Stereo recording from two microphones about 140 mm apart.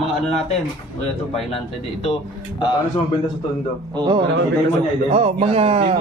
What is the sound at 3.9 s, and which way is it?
Speech, 35° right (ahead or behind).